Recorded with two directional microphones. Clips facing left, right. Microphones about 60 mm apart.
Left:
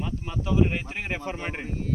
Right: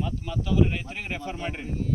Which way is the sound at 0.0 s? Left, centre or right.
Left.